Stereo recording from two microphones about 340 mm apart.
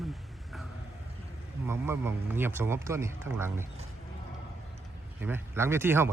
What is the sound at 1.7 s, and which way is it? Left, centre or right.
Speech, centre.